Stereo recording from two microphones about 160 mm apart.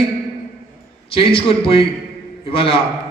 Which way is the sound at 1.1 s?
35° left (ahead or behind).